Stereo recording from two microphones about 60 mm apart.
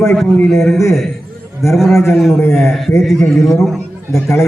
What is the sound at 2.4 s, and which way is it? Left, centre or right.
Speech, left.